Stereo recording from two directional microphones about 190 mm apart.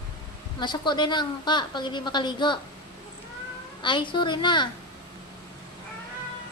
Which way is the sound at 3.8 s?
25° left (ahead or behind).